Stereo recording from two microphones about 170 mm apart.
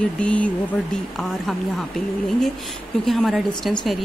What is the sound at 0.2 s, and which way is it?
Speech, 5° left (ahead or behind).